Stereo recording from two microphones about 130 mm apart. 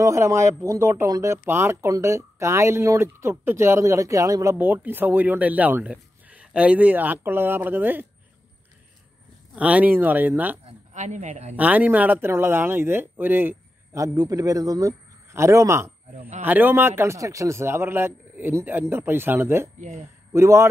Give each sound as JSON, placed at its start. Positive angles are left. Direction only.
{"t": 0.0, "sound": "speech", "side_deg": -20}
{"t": 9.6, "sound": "speech", "side_deg": -10}
{"t": 10.9, "sound": "speech", "side_deg": -65}
{"t": 11.5, "sound": "speech", "side_deg": -10}